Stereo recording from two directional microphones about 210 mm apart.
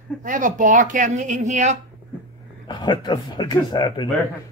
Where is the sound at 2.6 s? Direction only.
20° left (ahead or behind).